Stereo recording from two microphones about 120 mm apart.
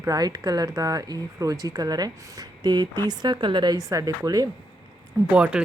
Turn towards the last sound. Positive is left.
turn(degrees=-10)  # may be behind; listen again after turning